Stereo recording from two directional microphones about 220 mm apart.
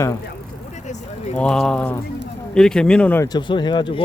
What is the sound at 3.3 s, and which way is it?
Speech, 20° left (ahead or behind).